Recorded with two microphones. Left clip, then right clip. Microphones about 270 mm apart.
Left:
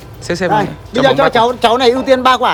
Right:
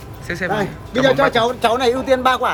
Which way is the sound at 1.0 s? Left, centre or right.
Left.